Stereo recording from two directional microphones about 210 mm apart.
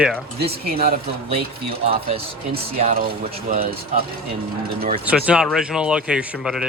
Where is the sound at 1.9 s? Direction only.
25° right (ahead or behind).